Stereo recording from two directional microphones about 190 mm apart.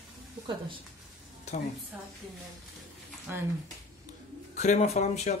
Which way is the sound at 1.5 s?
35° left (ahead or behind).